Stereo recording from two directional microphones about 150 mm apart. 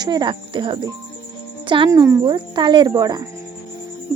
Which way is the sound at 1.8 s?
20° right (ahead or behind).